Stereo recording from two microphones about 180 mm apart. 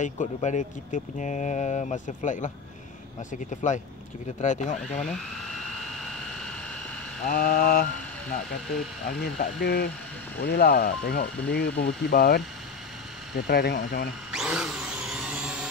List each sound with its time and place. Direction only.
0.0 s speech: 40° left (ahead or behind)
7.2 s speech: 50° left (ahead or behind)
9.2 s speech: 65° left (ahead or behind)
14.3 s a sound: 5° right (ahead or behind)